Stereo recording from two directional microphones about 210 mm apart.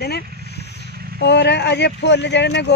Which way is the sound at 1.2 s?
55° left (ahead or behind).